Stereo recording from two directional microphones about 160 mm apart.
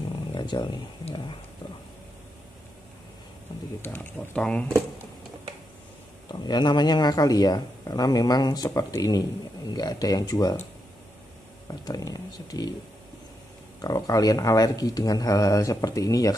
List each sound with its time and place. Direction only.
0.3 s a sound: 30° left (ahead or behind)
1.0 s speech: 30° left (ahead or behind)
3.8 s speech: 10° left (ahead or behind)
6.4 s speech: 25° left (ahead or behind)
11.6 s speech: 25° left (ahead or behind)
13.7 s speech: 25° left (ahead or behind)